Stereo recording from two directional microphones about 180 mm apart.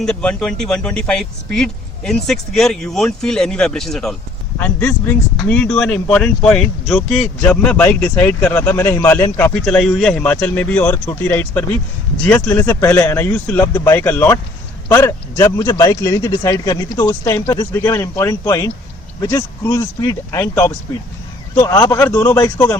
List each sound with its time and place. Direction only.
0.0 s speech: 5° left (ahead or behind); by 22.8 s 20° left (ahead or behind)